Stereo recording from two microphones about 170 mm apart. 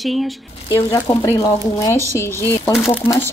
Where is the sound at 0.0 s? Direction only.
Centre (ahead or behind).